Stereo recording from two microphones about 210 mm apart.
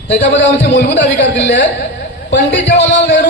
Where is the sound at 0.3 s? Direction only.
60° left (ahead or behind).